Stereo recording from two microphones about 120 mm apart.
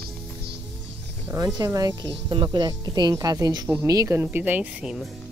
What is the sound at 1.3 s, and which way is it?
Speech, 30° right (ahead or behind).